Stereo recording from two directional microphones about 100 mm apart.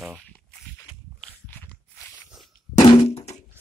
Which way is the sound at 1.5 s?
20° left (ahead or behind).